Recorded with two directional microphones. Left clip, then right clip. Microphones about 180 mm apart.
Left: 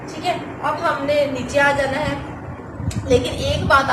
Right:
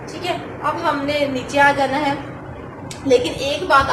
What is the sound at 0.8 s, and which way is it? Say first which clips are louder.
Speech: left 2 dB; 30° right (ahead or behind).